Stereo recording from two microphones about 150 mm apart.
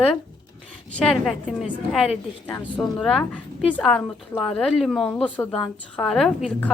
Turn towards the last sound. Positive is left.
turn(degrees=-5)  # may be behind; listen again after turning